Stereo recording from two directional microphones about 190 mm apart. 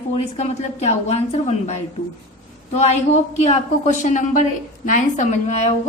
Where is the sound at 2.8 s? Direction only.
35° left (ahead or behind).